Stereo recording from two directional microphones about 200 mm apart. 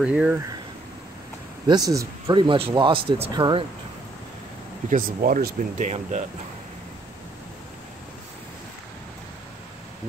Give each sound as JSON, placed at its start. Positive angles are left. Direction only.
{"t": 0.0, "sound": "speech", "side_deg": -5}
{"t": 1.7, "sound": "speech", "side_deg": -15}
{"t": 4.8, "sound": "speech", "side_deg": -45}